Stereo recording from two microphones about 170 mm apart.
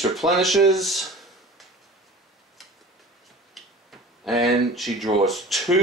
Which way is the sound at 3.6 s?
Centre (ahead or behind).